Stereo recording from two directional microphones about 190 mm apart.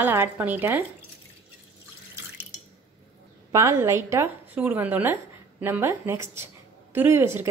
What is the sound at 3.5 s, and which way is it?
A woman's voice, 15° right (ahead or behind).